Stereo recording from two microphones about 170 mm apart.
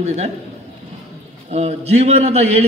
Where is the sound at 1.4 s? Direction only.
40° right (ahead or behind).